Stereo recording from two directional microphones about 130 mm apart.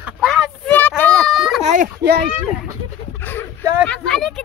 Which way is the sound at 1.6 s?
65° right (ahead or behind).